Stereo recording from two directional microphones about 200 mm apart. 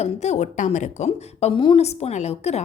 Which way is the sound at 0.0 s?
35° left (ahead or behind).